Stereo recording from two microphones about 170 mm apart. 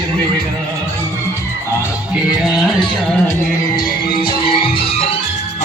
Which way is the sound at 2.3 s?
Centre (ahead or behind).